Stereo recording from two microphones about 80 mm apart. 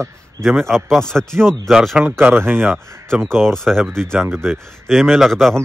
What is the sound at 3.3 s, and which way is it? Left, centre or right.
Speech, centre.